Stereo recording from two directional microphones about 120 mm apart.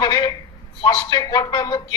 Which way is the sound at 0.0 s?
35° left (ahead or behind).